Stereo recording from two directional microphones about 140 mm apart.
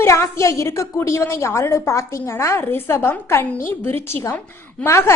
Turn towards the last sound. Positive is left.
turn(degrees=20)  # may be behind; listen again after turning